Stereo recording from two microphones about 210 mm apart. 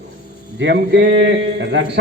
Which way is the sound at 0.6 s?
55° right (ahead or behind).